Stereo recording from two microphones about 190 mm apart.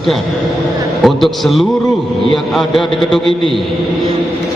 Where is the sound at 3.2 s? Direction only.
25° right (ahead or behind).